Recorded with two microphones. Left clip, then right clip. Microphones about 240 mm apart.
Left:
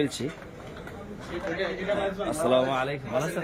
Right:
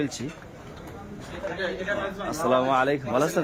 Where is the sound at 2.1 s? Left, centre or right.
Centre.